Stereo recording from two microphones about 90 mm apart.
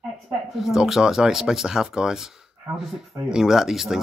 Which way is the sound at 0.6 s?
5° right (ahead or behind).